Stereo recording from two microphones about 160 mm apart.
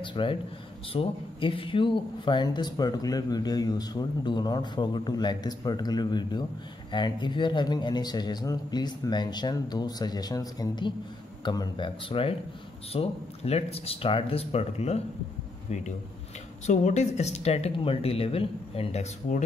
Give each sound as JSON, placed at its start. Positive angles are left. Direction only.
{"t": 0.0, "sound": "speech", "side_deg": 30}